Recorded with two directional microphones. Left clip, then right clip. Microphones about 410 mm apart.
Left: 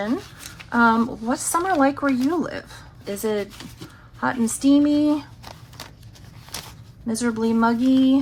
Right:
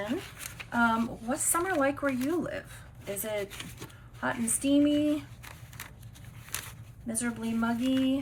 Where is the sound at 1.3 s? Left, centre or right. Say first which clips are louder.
Left 7 dB; centre.